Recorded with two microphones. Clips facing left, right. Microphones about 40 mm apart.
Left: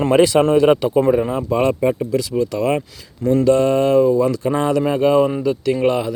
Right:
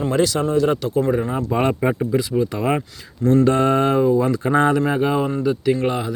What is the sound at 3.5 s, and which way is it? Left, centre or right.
Mantra, right.